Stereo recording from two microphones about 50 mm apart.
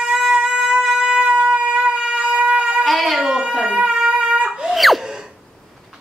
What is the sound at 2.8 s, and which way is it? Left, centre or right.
Baby cry, centre.